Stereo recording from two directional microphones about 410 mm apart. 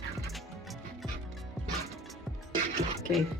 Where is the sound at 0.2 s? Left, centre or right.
Centre.